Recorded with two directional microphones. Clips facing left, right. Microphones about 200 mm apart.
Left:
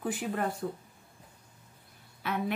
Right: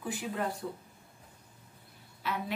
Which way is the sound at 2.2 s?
55° left (ahead or behind).